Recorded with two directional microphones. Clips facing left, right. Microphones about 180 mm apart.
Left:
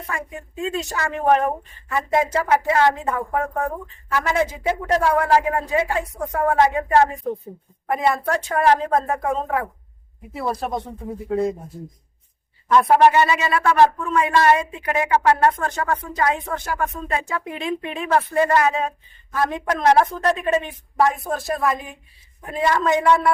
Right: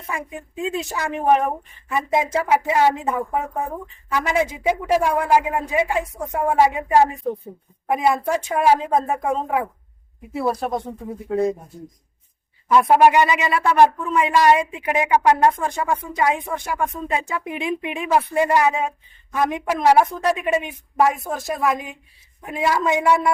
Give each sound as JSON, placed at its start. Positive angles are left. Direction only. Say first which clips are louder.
{"t": 0.1, "sound": "speech", "louder": "right 2 dB", "side_deg": -15}
{"t": 10.3, "sound": "speech", "louder": "right 2 dB", "side_deg": 0}
{"t": 12.6, "sound": "speech", "louder": "even", "side_deg": -10}